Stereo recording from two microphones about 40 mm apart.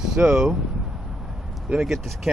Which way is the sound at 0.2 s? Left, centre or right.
Right.